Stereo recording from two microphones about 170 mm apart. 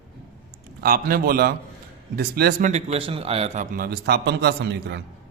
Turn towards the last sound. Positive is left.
turn(degrees=-75)  # may be behind; listen again after turning